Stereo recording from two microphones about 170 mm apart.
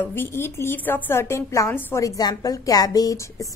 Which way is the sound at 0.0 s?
10° left (ahead or behind).